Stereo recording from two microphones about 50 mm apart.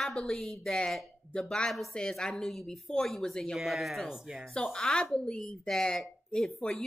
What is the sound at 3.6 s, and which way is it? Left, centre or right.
Speech, centre.